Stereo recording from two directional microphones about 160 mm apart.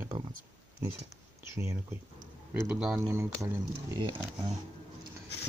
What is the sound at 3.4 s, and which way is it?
Speech, 20° right (ahead or behind).